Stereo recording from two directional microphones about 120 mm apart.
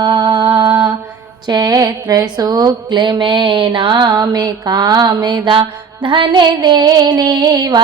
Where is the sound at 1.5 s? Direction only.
35° right (ahead or behind).